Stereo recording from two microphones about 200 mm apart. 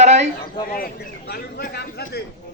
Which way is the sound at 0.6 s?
45° left (ahead or behind).